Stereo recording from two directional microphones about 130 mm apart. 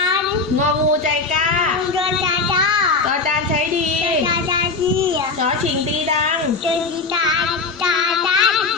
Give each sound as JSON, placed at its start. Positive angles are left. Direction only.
{"t": 2.0, "sound": "child singing", "side_deg": -40}
{"t": 7.9, "sound": "child singing", "side_deg": -5}